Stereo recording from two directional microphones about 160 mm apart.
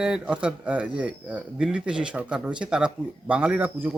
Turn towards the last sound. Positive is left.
turn(degrees=-10)  # may be behind; listen again after turning